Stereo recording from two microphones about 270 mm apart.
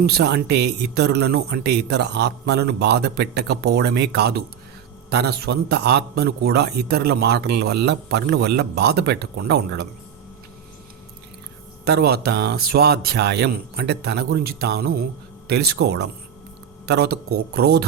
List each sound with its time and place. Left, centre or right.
0.0 s a man's voice: right
11.9 s a man's voice: right